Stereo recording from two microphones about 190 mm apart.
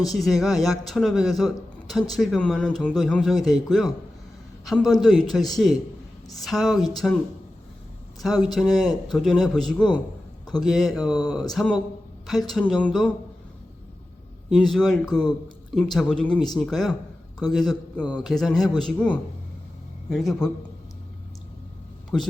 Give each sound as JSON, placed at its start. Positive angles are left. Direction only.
{"t": 0.1, "sound": "speech", "side_deg": 0}
{"t": 8.2, "sound": "speech", "side_deg": 0}
{"t": 10.9, "sound": "speech", "side_deg": 20}
{"t": 11.2, "sound": "speech", "side_deg": 0}
{"t": 14.5, "sound": "speech", "side_deg": 0}
{"t": 22.1, "sound": "speech", "side_deg": 0}